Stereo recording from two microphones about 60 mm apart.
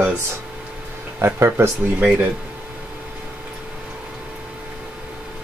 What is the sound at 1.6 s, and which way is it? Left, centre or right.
Speech, right.